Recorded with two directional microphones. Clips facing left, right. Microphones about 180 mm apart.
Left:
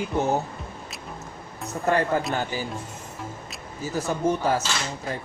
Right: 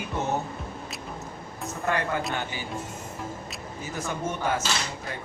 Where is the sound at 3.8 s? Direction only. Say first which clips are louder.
Left 6 dB; 35° left (ahead or behind).